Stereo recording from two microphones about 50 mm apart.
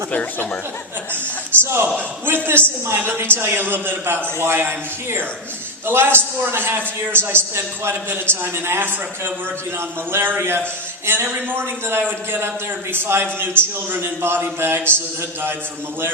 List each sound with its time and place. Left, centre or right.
0.1 s speech: left
1.5 s a man's voice: right
5.8 s a man's voice: right